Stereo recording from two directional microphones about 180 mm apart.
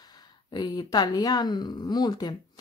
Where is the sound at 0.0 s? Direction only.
20° left (ahead or behind).